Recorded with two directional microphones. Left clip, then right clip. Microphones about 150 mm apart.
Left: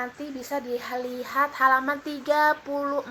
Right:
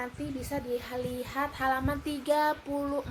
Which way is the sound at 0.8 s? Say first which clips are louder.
Left 4 dB; 40° right (ahead or behind).